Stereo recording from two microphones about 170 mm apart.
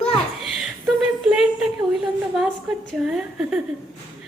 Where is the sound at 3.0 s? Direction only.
5° right (ahead or behind).